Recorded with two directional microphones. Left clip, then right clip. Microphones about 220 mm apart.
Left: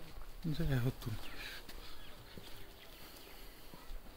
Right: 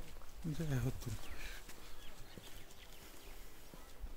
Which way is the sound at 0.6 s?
10° left (ahead or behind).